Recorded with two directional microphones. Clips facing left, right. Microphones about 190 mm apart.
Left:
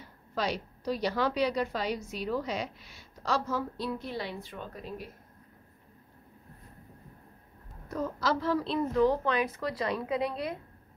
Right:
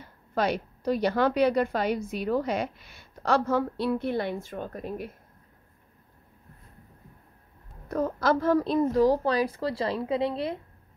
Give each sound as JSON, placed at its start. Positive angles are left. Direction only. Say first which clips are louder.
{"t": 0.3, "sound": "a woman's voice", "louder": "right 5 dB", "side_deg": -55}
{"t": 7.9, "sound": "a woman's voice", "louder": "right 5 dB", "side_deg": -55}